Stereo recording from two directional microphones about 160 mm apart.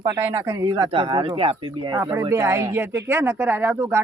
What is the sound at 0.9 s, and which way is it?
Speech, 30° right (ahead or behind).